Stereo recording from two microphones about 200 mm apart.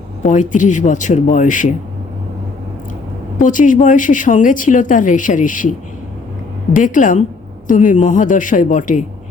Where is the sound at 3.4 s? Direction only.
40° left (ahead or behind).